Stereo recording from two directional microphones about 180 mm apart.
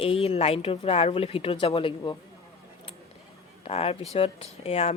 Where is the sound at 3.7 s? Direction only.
35° left (ahead or behind).